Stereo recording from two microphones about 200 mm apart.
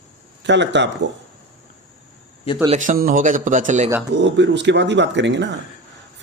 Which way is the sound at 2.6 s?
35° right (ahead or behind).